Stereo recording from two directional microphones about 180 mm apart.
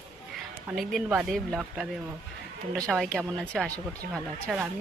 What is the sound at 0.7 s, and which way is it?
Speech, 5° right (ahead or behind).